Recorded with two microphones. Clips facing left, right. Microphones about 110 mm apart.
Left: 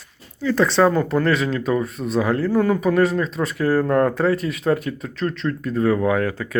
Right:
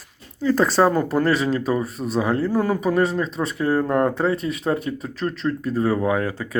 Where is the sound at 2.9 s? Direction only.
25° right (ahead or behind).